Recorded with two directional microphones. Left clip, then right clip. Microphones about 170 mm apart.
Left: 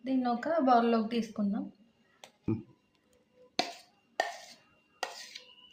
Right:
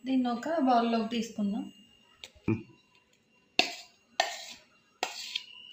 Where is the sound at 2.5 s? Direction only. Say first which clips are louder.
Right 3 dB; 15° right (ahead or behind).